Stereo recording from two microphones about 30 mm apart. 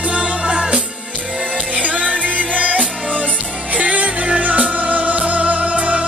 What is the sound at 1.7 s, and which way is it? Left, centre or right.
Music, right.